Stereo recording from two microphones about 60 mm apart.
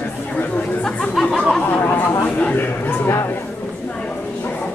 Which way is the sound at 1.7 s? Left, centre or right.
Left.